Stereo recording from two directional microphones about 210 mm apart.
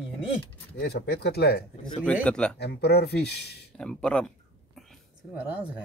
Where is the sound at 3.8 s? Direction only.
5° left (ahead or behind).